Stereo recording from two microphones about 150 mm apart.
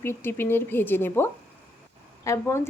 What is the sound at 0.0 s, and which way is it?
A woman's voice, 15° left (ahead or behind).